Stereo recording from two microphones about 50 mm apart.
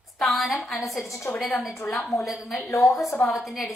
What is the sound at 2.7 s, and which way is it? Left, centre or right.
Speech, left.